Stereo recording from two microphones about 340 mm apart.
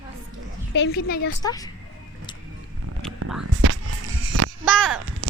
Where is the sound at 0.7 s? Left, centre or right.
Left.